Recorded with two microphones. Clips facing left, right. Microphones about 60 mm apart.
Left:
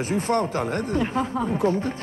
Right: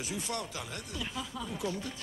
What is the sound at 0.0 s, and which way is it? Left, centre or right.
Speech, left.